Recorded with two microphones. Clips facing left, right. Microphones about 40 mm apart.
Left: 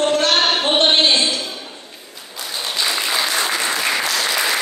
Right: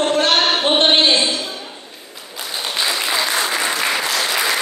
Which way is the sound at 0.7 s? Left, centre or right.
Right.